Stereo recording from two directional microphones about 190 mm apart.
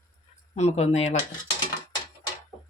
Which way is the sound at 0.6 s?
35° left (ahead or behind).